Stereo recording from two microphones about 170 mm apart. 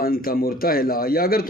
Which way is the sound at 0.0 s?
60° left (ahead or behind).